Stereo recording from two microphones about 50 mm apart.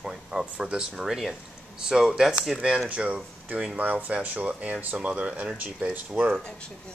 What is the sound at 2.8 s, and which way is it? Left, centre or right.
Speech, right.